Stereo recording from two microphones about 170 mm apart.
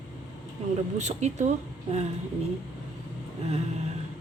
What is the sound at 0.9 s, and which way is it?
Speech, 40° right (ahead or behind).